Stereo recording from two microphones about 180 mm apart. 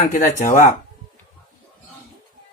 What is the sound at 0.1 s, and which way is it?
Speech, 45° left (ahead or behind).